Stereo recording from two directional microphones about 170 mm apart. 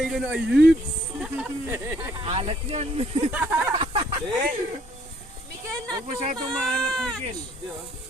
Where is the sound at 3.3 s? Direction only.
10° right (ahead or behind).